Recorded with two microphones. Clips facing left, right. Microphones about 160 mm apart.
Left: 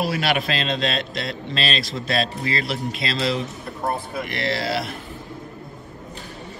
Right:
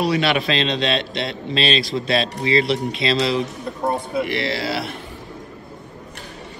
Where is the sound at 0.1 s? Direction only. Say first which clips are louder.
Right 3 dB; 50° left (ahead or behind).